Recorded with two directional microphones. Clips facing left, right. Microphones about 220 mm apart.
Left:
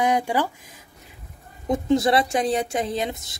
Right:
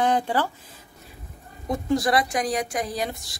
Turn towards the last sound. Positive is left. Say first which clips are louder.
# left 3 dB
turn(degrees=20)  # may be behind; listen again after turning